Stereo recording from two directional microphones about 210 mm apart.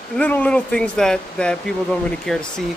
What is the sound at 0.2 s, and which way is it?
Speech, 5° left (ahead or behind).